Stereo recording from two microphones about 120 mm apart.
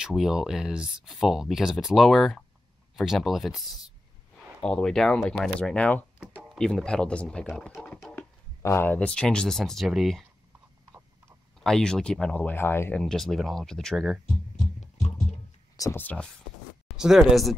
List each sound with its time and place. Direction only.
0.0 s speech: 5° right (ahead or behind)
7.7 s a sound: centre (ahead or behind)
8.6 s speech: 20° left (ahead or behind); by 10.2 s centre (ahead or behind)
10.9 s a sound: 25° right (ahead or behind)
11.6 s speech: 5° left (ahead or behind)
12.9 s speech: centre (ahead or behind)
15.7 s music: 30° left (ahead or behind)
16.0 s speech: 10° left (ahead or behind)
16.8 s speech: 5° right (ahead or behind)